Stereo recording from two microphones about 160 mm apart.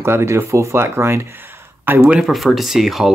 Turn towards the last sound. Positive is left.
turn(degrees=0)  # may be behind; listen again after turning